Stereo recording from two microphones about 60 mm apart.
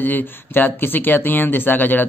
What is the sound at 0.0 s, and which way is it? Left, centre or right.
Speech, left.